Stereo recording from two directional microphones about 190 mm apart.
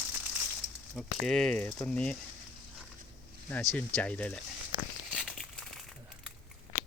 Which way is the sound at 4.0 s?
5° left (ahead or behind).